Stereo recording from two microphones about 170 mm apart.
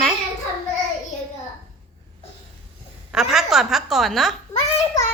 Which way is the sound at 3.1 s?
Centre (ahead or behind).